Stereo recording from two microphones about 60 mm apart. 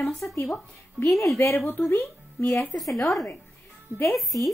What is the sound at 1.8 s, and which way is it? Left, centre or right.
Speech, left.